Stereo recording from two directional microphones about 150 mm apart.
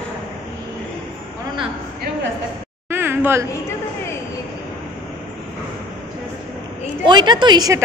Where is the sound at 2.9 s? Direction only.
15° right (ahead or behind).